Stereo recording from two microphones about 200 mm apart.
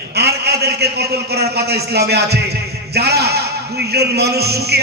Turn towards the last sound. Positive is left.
turn(degrees=-55)  # may be behind; listen again after turning